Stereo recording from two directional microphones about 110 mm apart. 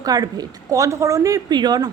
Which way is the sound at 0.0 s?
35° right (ahead or behind).